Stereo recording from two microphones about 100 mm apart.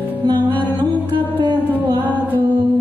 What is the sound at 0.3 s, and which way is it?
Music, 50° right (ahead or behind).